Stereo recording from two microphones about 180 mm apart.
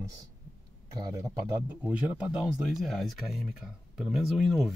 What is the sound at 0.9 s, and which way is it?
Speech, 20° right (ahead or behind).